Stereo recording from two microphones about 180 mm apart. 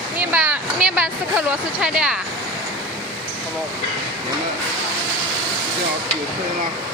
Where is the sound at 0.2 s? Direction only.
5° right (ahead or behind).